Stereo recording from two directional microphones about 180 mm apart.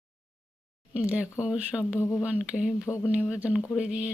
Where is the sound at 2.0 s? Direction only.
15° left (ahead or behind).